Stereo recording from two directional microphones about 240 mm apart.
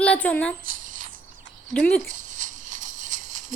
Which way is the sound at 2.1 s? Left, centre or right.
Right.